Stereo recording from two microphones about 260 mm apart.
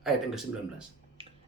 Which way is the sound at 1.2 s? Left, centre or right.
Right.